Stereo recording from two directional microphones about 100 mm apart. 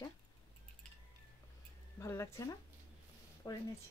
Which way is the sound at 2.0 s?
25° left (ahead or behind).